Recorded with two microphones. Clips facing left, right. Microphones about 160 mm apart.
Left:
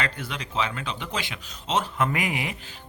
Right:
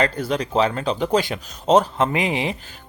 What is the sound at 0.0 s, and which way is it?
Speech, 40° right (ahead or behind).